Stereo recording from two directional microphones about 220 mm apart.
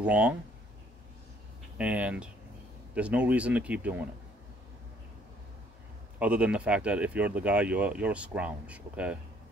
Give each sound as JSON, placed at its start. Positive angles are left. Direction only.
{"t": 0.0, "sound": "speech", "side_deg": -5}
{"t": 1.8, "sound": "speech", "side_deg": -5}
{"t": 6.1, "sound": "speech", "side_deg": -5}